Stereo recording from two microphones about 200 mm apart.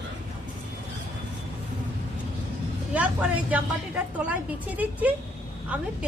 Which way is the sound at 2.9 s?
5° right (ahead or behind).